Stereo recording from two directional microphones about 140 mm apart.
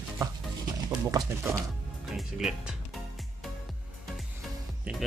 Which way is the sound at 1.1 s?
20° right (ahead or behind).